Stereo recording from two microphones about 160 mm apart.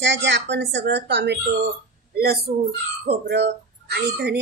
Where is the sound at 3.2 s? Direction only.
90° right.